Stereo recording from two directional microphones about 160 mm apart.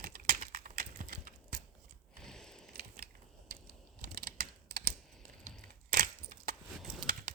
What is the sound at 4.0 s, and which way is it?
Typing, 65° right (ahead or behind).